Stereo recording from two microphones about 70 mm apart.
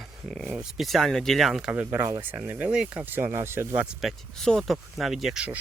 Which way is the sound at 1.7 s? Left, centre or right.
Right.